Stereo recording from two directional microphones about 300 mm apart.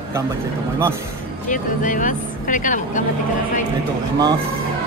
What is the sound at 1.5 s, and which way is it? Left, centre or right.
Speech, left.